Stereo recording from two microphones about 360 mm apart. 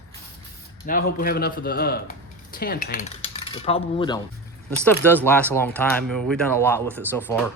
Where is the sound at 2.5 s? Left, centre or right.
Left.